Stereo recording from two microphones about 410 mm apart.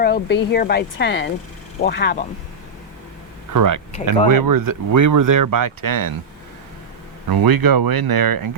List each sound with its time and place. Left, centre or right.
0.0 s speech: left
3.5 s speech: right
7.3 s speech: right